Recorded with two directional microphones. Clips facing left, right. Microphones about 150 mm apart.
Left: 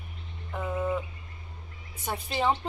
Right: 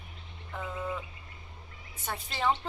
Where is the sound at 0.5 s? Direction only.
10° left (ahead or behind).